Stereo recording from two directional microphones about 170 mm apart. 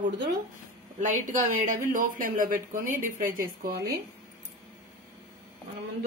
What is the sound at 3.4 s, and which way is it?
Speech, 60° right (ahead or behind).